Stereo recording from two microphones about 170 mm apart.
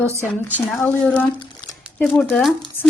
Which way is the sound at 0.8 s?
10° left (ahead or behind).